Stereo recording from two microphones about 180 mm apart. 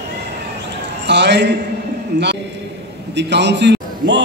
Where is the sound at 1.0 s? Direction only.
70° right (ahead or behind).